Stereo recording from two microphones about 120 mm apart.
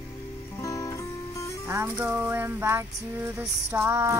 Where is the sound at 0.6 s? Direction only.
25° left (ahead or behind).